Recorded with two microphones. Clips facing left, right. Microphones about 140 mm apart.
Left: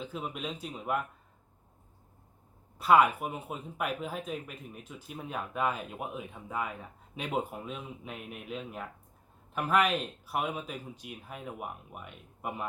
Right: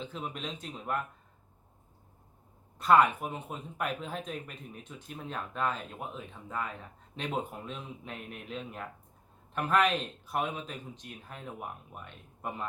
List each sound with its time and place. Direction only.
0.0 s speech: 5° left (ahead or behind)
2.7 s speech: 5° left (ahead or behind)